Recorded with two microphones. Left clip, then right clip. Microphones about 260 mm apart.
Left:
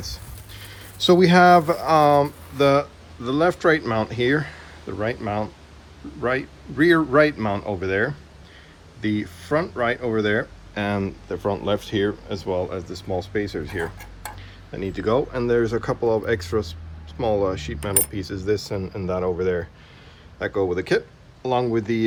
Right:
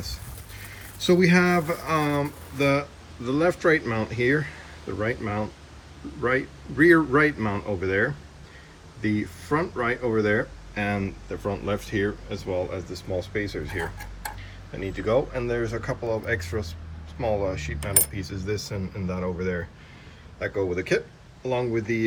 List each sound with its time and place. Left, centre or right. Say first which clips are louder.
0.9 s speech: left 5 dB; centre
20.4 s speech: left 4 dB; centre